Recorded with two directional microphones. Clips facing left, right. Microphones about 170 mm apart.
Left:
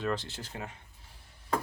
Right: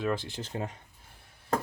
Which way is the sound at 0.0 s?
10° right (ahead or behind).